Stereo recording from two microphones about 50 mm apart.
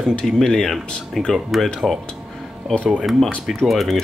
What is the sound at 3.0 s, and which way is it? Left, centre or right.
Speech, centre.